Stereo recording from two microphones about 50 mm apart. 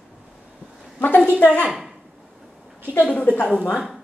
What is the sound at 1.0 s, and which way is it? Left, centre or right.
Speech, left.